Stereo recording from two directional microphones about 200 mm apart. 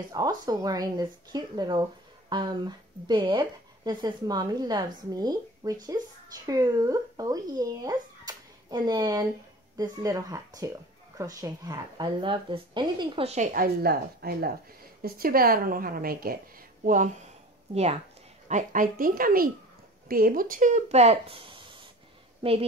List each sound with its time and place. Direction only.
0.1 s a woman's voice: 20° right (ahead or behind); by 17.1 s 40° right (ahead or behind)
18.5 s a woman's voice: 40° right (ahead or behind)